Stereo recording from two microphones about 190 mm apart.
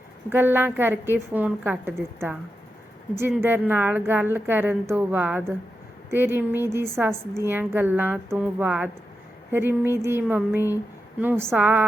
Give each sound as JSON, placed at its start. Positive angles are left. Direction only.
{"t": 0.3, "sound": "a woman's voice", "side_deg": -10}